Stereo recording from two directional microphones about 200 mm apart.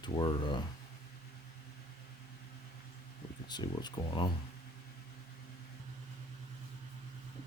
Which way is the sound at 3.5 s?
20° left (ahead or behind).